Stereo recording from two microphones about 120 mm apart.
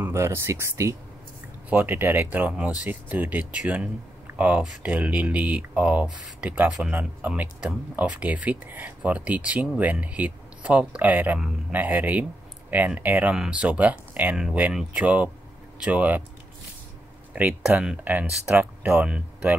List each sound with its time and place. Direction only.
0.0 s speech: 20° right (ahead or behind)
17.3 s speech: 10° right (ahead or behind)